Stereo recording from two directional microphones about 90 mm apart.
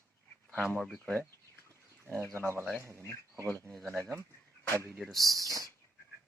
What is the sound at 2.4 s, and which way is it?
Speech, 30° right (ahead or behind).